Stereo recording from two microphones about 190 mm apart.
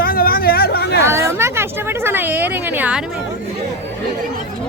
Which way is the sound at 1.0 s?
15° right (ahead or behind).